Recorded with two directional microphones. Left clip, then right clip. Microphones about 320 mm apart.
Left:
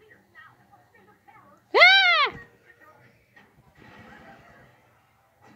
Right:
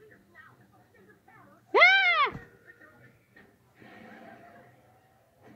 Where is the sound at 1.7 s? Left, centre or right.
Centre.